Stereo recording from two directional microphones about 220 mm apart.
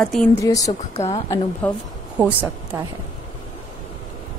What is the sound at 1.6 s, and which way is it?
Speech, 5° left (ahead or behind).